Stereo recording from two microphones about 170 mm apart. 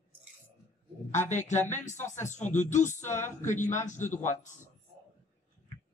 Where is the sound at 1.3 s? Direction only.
45° left (ahead or behind).